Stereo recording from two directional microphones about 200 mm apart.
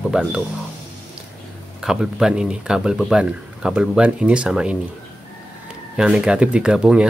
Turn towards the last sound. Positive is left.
turn(degrees=-5)  # may be behind; listen again after turning